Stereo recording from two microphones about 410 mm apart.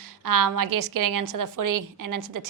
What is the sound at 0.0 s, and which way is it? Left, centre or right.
A woman's voice, right.